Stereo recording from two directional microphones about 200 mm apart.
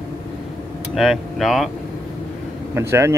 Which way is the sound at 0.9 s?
Centre (ahead or behind).